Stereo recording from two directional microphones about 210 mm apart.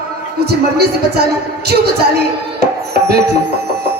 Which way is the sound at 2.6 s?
50° right (ahead or behind).